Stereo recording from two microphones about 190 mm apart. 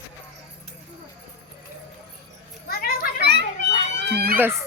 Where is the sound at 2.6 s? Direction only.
55° left (ahead or behind).